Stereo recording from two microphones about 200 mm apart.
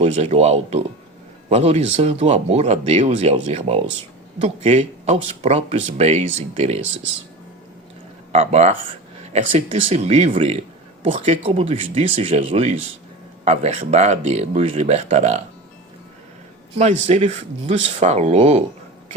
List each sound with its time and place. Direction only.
0.0 s speech: 30° right (ahead or behind)
8.3 s speech: 35° right (ahead or behind)
16.7 s speech: 35° right (ahead or behind)